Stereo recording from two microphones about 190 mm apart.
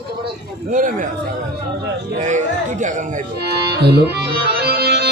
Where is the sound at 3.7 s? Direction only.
60° right (ahead or behind).